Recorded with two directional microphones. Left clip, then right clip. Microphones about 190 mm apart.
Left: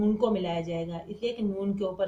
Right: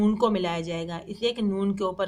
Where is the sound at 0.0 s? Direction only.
30° right (ahead or behind).